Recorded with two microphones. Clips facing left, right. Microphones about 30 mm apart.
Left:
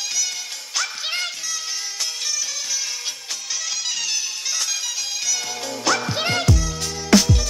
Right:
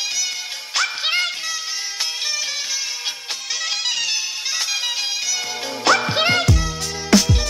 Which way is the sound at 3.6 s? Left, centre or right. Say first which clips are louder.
Right 5 dB; right.